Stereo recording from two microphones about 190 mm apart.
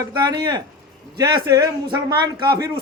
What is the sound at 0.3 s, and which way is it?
A man's voice, 20° right (ahead or behind).